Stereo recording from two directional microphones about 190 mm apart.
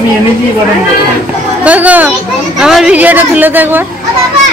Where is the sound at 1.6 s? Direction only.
10° right (ahead or behind).